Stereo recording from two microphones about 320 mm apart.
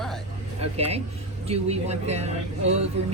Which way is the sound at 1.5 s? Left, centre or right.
Centre.